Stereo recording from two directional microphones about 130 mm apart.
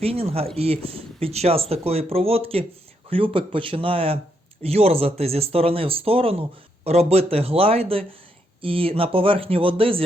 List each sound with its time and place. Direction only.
0.0 s speech: 50° right (ahead or behind)